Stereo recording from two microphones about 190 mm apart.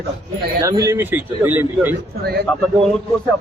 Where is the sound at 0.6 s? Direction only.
15° right (ahead or behind).